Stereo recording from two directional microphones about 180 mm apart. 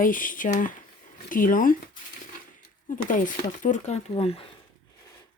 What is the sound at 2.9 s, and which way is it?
Speech, 45° left (ahead or behind).